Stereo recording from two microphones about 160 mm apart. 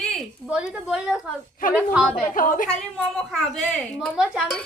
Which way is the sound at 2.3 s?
60° left (ahead or behind).